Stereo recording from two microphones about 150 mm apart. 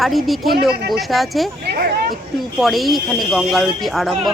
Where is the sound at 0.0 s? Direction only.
Centre (ahead or behind).